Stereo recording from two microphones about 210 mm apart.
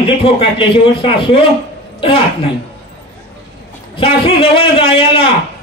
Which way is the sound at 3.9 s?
25° left (ahead or behind).